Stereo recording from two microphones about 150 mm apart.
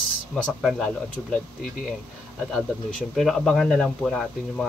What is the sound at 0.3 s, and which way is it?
Speech, 5° left (ahead or behind).